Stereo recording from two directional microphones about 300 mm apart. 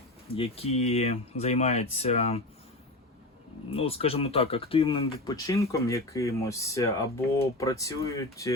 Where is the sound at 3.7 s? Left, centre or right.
Centre.